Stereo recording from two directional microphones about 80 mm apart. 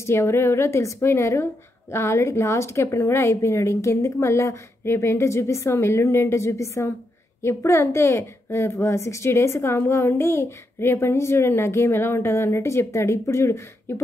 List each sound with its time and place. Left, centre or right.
0.0 s a woman's voice: left